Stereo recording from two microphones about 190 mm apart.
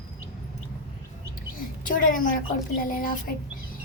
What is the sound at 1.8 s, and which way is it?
A woman's voice, 45° left (ahead or behind).